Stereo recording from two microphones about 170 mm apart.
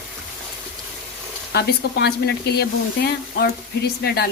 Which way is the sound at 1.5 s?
70° left (ahead or behind).